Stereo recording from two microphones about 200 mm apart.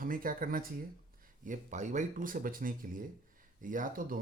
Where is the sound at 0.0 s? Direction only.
45° right (ahead or behind).